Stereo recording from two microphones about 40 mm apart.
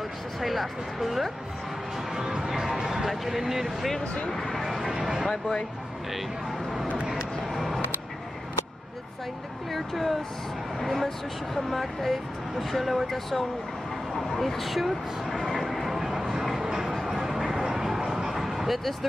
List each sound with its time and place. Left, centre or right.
0.4 s speech: centre
2.1 s music: centre
2.7 s a sound: centre
3.1 s speech: centre
3.6 s speech: centre
4.0 s speech: left
4.3 s speech: centre
4.6 s speech: centre
7.5 s vehicle: centre
9.7 s speech: centre
15.4 s a sound: centre
17.8 s vehicle: centre